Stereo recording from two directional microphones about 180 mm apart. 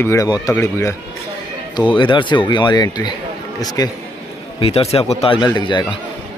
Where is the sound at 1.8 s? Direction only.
25° left (ahead or behind).